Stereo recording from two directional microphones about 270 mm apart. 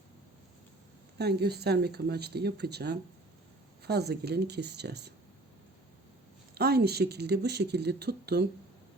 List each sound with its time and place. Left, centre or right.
1.2 s speech: right
6.5 s speech: right